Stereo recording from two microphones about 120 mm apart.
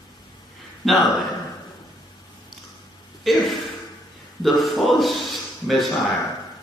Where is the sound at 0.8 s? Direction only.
Centre (ahead or behind).